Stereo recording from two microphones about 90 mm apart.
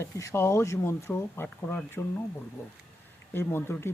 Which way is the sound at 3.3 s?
25° left (ahead or behind).